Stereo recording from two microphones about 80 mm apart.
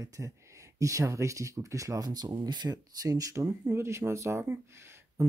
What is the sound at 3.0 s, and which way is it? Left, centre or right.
Speech, right.